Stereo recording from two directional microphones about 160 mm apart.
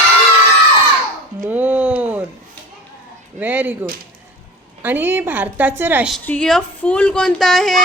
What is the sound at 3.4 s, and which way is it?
Speech, 10° right (ahead or behind).